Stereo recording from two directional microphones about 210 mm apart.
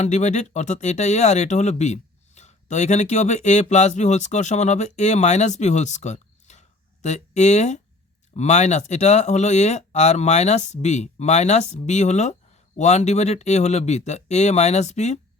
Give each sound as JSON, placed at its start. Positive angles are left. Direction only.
{"t": 0.0, "sound": "speech", "side_deg": 35}